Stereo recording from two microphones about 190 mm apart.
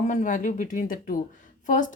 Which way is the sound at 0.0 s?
40° left (ahead or behind).